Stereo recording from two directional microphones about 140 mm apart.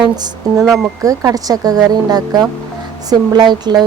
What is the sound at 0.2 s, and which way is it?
A woman's voice, 30° right (ahead or behind).